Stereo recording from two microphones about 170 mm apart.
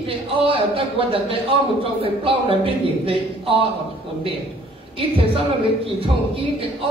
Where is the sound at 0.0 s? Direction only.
35° right (ahead or behind).